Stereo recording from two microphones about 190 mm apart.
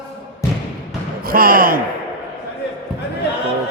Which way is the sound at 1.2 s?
50° right (ahead or behind).